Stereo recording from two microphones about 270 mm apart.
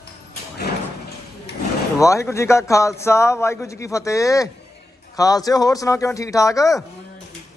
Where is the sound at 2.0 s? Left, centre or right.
Centre.